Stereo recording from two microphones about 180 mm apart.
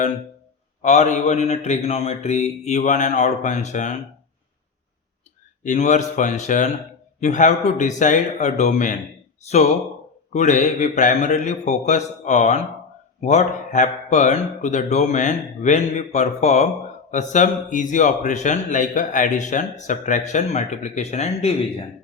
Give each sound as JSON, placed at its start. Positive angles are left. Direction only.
{"t": 0.8, "sound": "speech", "side_deg": 40}
{"t": 5.6, "sound": "speech", "side_deg": 40}
{"t": 10.3, "sound": "speech", "side_deg": 40}